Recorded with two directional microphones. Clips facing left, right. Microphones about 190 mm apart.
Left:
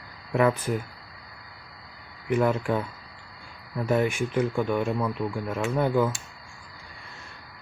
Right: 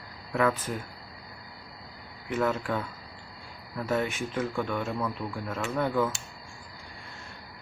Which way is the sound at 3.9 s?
10° left (ahead or behind).